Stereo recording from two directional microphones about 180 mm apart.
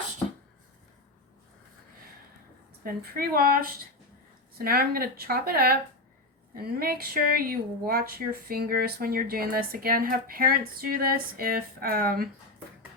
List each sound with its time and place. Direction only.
2.8 s speech: 55° right (ahead or behind)